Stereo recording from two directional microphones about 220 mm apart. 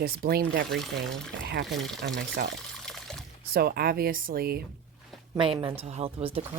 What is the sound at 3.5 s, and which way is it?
Speech, 45° right (ahead or behind).